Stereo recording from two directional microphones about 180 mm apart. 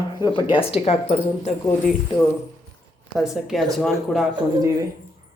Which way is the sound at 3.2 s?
Centre (ahead or behind).